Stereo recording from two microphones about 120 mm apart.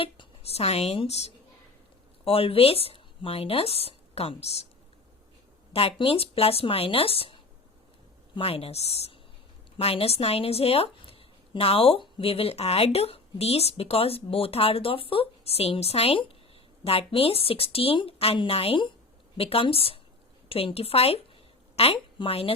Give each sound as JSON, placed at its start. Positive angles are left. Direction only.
{"t": 0.0, "sound": "speech", "side_deg": 50}
{"t": 5.7, "sound": "a woman's voice", "side_deg": 50}